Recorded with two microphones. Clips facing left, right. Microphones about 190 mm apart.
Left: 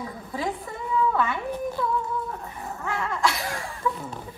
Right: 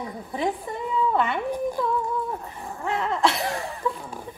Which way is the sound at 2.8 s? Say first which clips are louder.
Right 3 dB; 20° right (ahead or behind).